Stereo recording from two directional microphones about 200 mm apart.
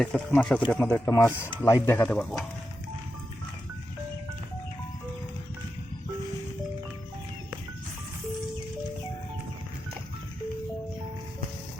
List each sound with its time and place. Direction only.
0.0 s speech: 5° left (ahead or behind)